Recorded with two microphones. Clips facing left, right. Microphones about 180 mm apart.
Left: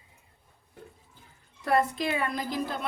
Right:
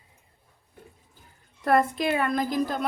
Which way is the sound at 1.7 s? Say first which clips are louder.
Right 3 dB; 55° right (ahead or behind).